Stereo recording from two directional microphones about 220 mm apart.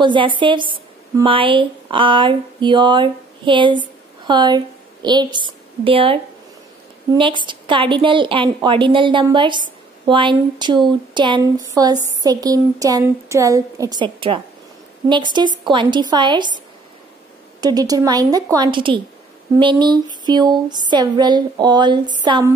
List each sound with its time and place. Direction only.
0.0 s a woman's voice: 20° right (ahead or behind)
7.2 s a woman's voice: 20° right (ahead or behind)
17.6 s a woman's voice: 15° right (ahead or behind)